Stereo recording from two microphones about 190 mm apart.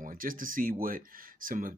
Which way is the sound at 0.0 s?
45° right (ahead or behind).